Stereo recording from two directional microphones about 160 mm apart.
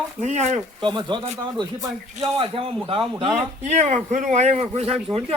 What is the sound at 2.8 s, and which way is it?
Speech, 30° right (ahead or behind).